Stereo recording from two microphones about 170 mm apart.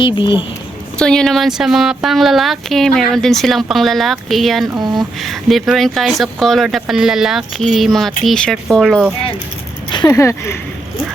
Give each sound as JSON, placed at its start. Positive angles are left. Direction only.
{"t": 0.0, "sound": "speech", "side_deg": 25}
{"t": 0.9, "sound": "speech", "side_deg": 5}
{"t": 4.8, "sound": "speech", "side_deg": -25}
{"t": 5.2, "sound": "speech", "side_deg": 0}
{"t": 9.9, "sound": "speech", "side_deg": 20}